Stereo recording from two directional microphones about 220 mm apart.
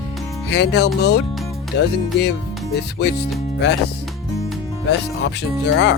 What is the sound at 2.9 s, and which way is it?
Speech, 50° left (ahead or behind).